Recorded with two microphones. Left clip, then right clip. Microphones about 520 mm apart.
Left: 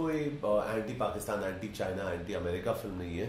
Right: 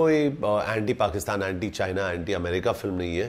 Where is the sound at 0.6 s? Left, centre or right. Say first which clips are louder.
Right 8 dB; right.